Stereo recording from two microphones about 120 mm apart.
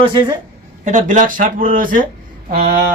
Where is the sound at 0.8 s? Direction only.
90° right.